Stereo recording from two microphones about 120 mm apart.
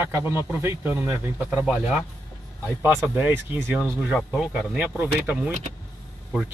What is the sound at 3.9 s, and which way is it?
Speech, 5° right (ahead or behind).